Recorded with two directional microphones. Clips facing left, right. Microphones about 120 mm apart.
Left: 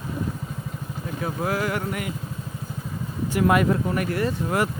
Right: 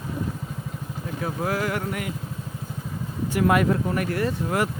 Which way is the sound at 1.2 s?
15° left (ahead or behind).